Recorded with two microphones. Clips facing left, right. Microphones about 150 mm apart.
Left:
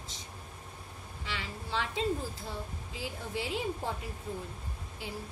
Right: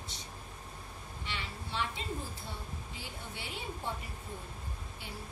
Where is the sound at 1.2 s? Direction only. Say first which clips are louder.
Left 3 dB; 90° left.